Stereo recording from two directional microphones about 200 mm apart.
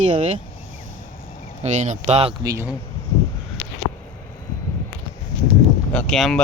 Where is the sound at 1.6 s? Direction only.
35° right (ahead or behind).